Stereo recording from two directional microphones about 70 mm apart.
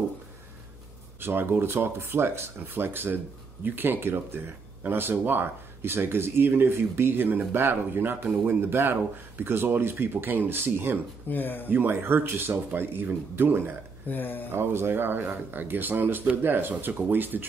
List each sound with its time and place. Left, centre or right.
1.2 s speech: right
11.2 s speech: left
11.7 s speech: right
14.0 s speech: left
14.5 s speech: right